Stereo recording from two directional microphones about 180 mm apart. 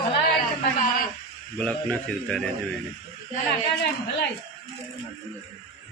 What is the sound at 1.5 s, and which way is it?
Speech, 5° left (ahead or behind).